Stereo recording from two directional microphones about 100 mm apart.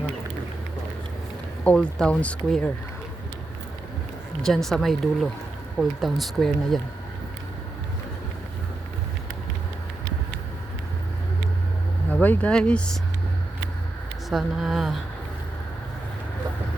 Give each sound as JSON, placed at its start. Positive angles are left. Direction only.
{"t": 1.6, "sound": "speech", "side_deg": 10}
{"t": 4.4, "sound": "speech", "side_deg": 5}
{"t": 12.1, "sound": "speech", "side_deg": 15}
{"t": 14.3, "sound": "speech", "side_deg": -5}